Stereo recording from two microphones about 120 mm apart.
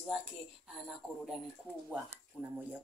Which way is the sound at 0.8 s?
5° right (ahead or behind).